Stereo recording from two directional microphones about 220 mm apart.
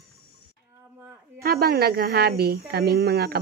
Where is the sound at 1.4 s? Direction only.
45° right (ahead or behind).